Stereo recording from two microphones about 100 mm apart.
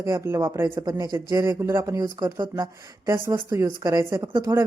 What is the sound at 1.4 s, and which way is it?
A woman's voice, 25° right (ahead or behind).